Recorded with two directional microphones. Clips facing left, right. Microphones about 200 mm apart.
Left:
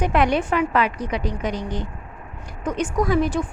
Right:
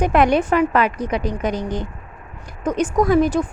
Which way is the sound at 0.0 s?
45° right (ahead or behind).